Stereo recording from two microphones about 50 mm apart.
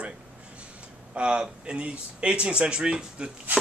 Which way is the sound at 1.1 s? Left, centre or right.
Right.